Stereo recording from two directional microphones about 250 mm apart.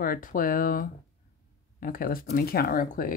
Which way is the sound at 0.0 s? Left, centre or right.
Left.